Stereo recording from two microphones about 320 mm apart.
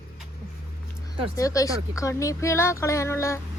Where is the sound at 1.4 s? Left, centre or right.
Centre.